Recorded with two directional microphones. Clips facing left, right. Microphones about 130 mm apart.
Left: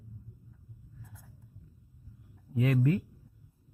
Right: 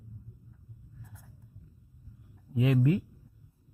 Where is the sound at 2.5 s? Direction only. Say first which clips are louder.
Right 2 dB; 15° right (ahead or behind).